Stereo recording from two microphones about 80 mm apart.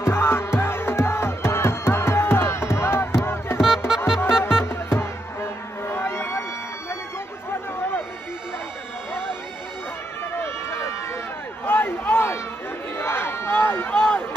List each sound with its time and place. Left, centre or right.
0.0 s music: left
3.6 s music: centre
4.6 s music: left
10.3 s run: left
11.6 s a sound: left
12.9 s crowd: left